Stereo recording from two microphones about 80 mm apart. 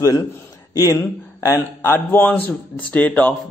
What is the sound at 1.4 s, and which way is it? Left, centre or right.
Speech, left.